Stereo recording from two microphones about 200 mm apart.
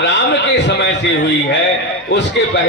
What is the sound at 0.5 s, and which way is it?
Speech, 60° left (ahead or behind).